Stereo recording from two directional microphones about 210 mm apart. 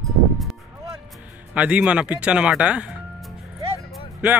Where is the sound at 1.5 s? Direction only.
5° right (ahead or behind).